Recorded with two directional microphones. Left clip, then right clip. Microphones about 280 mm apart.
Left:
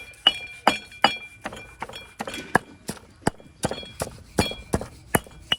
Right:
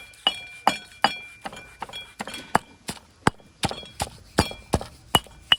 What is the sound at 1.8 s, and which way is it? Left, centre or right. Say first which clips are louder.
Horse: even; right.